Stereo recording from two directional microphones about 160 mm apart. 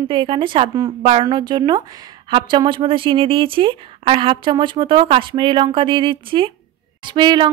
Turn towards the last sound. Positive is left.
turn(degrees=-30)  # may be behind; listen again after turning